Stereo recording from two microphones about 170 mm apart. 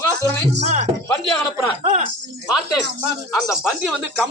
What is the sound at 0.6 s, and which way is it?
Speech, 40° right (ahead or behind).